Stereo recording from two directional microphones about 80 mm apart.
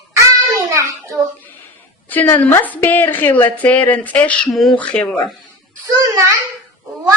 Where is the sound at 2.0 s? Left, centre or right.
Left.